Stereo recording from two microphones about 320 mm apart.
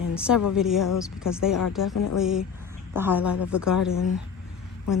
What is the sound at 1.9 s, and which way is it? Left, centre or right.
Speech, left.